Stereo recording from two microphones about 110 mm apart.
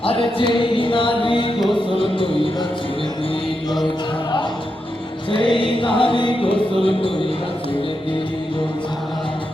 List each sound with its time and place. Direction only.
0.0 s a sound: 55° left (ahead or behind)
1.9 s music: 55° left (ahead or behind)
5.3 s music: 50° left (ahead or behind)
6.8 s speech: 55° left (ahead or behind)